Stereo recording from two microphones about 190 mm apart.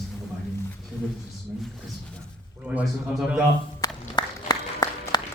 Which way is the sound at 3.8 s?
20° left (ahead or behind).